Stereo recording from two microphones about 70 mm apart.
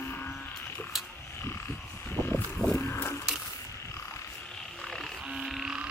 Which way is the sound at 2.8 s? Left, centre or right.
Left.